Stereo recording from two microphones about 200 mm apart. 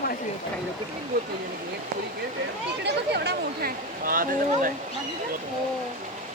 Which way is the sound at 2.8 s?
55° right (ahead or behind).